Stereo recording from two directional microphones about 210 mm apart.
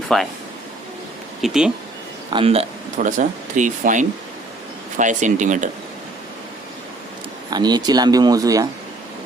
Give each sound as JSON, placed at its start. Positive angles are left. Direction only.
{"t": 0.1, "sound": "speech", "side_deg": 0}
{"t": 1.4, "sound": "speech", "side_deg": 0}
{"t": 2.3, "sound": "speech", "side_deg": -30}
{"t": 7.5, "sound": "speech", "side_deg": -20}